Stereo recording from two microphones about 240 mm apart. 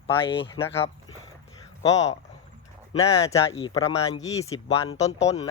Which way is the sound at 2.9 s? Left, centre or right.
Centre.